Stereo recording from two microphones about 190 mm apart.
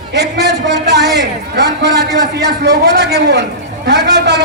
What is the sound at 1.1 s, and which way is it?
A man's voice, 60° right (ahead or behind).